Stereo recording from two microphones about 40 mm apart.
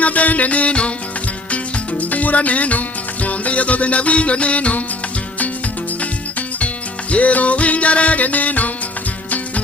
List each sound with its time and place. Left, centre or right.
0.0 s music: left
7.1 s music: left